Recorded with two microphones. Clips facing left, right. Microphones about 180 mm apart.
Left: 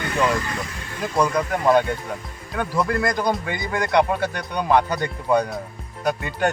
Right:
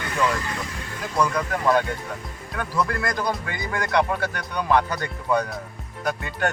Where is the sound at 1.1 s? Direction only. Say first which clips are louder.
Left 2 dB; 20° left (ahead or behind).